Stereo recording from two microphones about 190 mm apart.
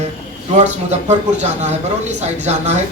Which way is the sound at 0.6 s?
35° right (ahead or behind).